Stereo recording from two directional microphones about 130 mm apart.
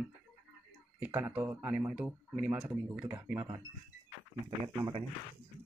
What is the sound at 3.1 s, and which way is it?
Speech, 20° right (ahead or behind).